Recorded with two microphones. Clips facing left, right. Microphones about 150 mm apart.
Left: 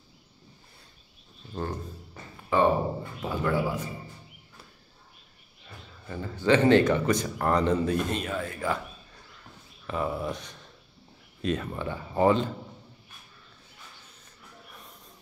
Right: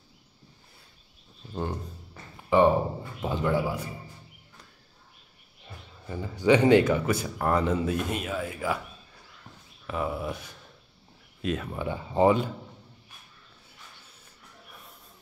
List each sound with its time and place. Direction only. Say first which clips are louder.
1.5 s a man's voice: right 1 dB; 10° right (ahead or behind)
6.0 s speech: right 2 dB; 15° right (ahead or behind)
9.8 s speech: left 1 dB; 5° right (ahead or behind)
11.8 s speech: right 2 dB; 15° right (ahead or behind)